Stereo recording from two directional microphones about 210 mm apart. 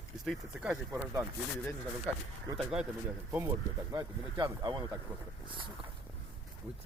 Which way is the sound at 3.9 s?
15° right (ahead or behind).